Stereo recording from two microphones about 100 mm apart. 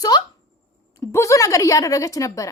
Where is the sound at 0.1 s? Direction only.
45° left (ahead or behind).